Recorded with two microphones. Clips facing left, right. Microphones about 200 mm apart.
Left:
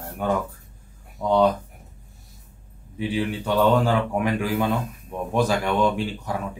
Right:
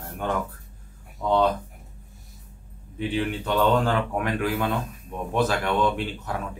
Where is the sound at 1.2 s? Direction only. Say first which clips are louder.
Left 1 dB; 10° left (ahead or behind).